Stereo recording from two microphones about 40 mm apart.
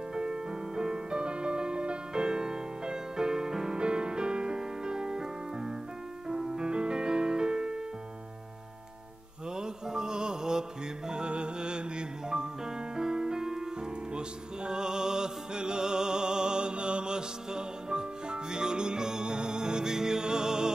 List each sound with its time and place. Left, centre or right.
0.1 s music: centre
9.6 s mantra: centre
11.1 s music: right